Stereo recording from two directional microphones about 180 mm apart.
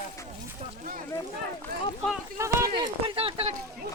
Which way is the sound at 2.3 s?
15° right (ahead or behind).